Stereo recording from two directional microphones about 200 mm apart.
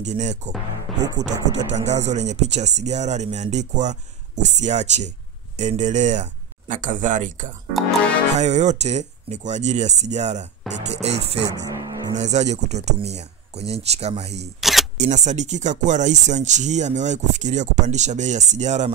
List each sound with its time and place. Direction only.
0.0 s speech: 35° right (ahead or behind)
1.0 s speech: 20° right (ahead or behind)
1.5 s speech: 35° right (ahead or behind)
11.5 s speech: 20° right (ahead or behind)
12.2 s speech: 35° right (ahead or behind)
14.6 s camera: centre (ahead or behind)
15.0 s speech: 35° right (ahead or behind)